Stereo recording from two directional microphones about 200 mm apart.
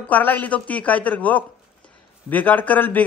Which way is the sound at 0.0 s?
10° left (ahead or behind).